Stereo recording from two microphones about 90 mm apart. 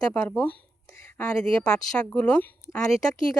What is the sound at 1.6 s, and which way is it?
A woman's voice, 10° left (ahead or behind).